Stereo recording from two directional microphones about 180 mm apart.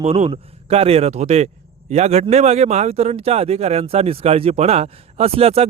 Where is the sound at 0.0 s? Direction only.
35° right (ahead or behind).